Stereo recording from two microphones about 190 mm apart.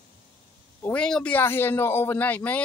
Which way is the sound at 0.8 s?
5° left (ahead or behind).